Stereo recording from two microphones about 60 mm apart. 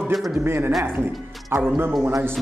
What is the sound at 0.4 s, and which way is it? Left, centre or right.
A man's voice, right.